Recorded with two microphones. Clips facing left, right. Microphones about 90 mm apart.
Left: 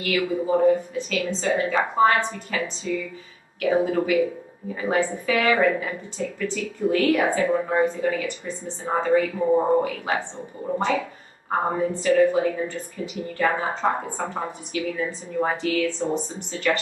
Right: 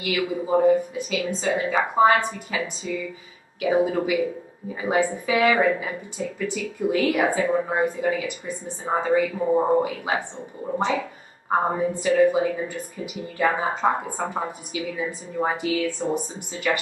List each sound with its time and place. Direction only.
0.0 s a woman's voice: 10° right (ahead or behind)